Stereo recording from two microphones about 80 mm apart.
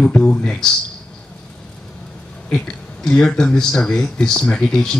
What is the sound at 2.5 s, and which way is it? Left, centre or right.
Speech, centre.